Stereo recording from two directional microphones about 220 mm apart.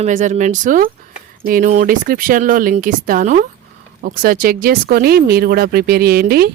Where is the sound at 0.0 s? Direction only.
35° right (ahead or behind).